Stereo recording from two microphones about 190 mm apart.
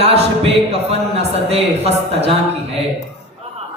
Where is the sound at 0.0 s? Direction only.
30° right (ahead or behind).